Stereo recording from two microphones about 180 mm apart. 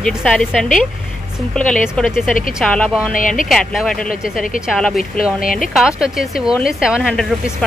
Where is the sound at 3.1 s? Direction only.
45° left (ahead or behind).